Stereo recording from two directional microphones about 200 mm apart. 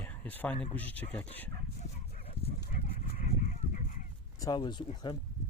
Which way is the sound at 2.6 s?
45° left (ahead or behind).